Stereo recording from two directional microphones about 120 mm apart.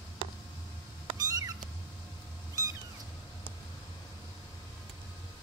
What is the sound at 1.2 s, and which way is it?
Cat, 30° right (ahead or behind).